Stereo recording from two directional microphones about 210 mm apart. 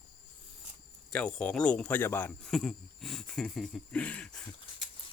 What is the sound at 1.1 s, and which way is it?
Speech, 5° left (ahead or behind).